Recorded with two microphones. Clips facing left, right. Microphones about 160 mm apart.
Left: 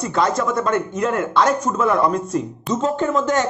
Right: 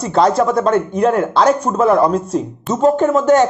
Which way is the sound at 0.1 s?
30° right (ahead or behind).